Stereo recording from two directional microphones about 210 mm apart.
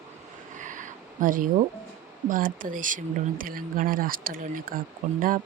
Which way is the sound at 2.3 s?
40° right (ahead or behind).